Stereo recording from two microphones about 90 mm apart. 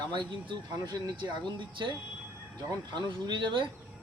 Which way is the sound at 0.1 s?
60° right (ahead or behind).